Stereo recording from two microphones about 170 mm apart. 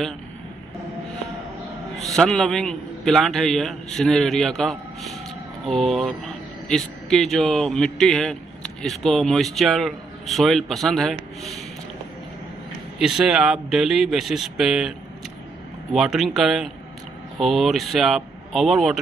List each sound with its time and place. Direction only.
2.0 s speech: centre (ahead or behind)
13.0 s speech: 5° right (ahead or behind)